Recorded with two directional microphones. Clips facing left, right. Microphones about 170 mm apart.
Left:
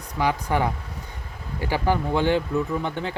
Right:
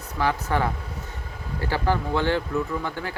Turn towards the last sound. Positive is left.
turn(degrees=20)  # may be behind; listen again after turning